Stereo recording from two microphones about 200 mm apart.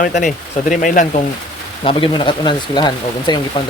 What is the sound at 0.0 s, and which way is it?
Speech, 40° left (ahead or behind).